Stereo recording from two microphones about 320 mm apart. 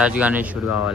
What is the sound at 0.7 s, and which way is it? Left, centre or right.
Speech, left.